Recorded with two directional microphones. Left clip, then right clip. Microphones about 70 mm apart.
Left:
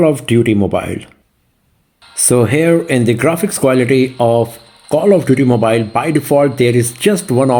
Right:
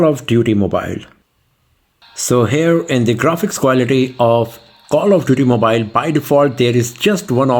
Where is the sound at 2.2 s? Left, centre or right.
Right.